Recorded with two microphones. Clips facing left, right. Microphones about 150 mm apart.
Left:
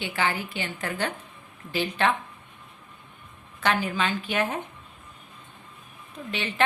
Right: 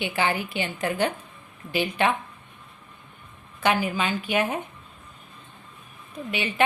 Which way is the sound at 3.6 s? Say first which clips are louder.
Right 2 dB; 10° right (ahead or behind).